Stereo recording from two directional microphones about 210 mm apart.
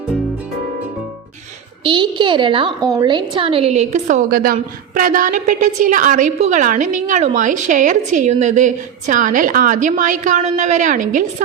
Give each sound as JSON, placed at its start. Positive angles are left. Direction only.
{"t": 1.8, "sound": "a woman's voice", "side_deg": -25}